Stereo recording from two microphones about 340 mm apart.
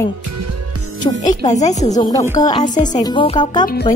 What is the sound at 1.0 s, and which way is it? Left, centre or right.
Speech, centre.